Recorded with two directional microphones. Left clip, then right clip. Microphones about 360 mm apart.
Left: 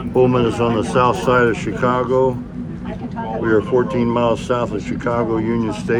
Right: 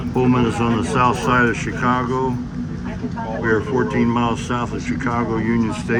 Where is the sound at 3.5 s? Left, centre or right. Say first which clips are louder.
Left 3 dB; left.